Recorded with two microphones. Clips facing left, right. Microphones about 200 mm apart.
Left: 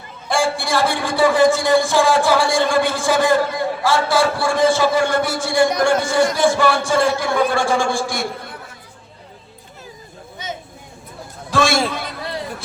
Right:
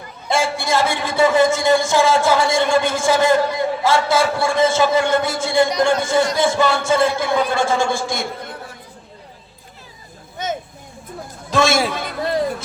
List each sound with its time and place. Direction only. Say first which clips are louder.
0.3 s a man's voice: even; 20° right (ahead or behind)
10.4 s a sound: right 6 dB; 50° right (ahead or behind)
11.5 s a man's voice: right 1 dB; 20° right (ahead or behind)